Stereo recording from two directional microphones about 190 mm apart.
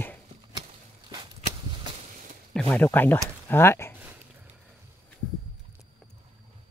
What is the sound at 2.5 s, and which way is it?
Speech, 5° left (ahead or behind).